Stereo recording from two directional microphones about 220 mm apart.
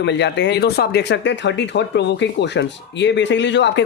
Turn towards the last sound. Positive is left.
turn(degrees=55)  # may be behind; listen again after turning